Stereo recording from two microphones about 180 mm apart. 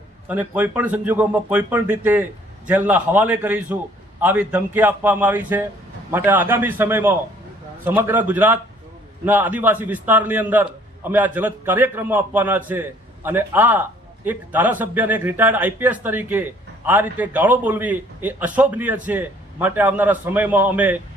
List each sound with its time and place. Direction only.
0.3 s a man's voice: 10° right (ahead or behind)